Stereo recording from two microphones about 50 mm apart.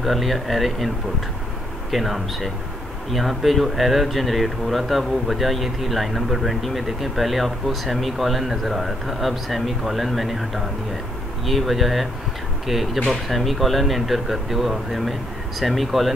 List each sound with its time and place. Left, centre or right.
0.0 s speech: centre